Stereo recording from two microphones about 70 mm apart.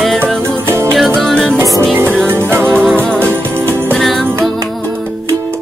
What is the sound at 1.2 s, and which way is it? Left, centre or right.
Music, centre.